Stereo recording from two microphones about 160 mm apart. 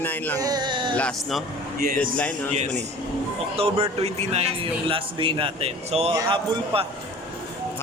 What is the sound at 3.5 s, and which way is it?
A man's voice, 40° right (ahead or behind).